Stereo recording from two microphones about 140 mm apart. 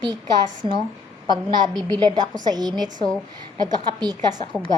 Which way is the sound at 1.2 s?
30° right (ahead or behind).